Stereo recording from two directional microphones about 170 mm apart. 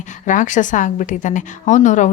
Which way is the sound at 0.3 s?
50° left (ahead or behind).